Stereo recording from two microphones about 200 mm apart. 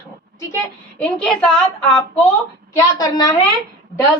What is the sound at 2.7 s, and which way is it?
Speech, 15° left (ahead or behind).